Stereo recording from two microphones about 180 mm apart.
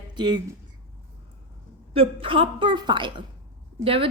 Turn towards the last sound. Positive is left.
turn(degrees=-30)  # may be behind; listen again after turning